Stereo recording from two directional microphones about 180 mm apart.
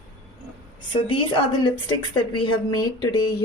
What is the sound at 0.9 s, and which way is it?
A woman's voice, 30° left (ahead or behind).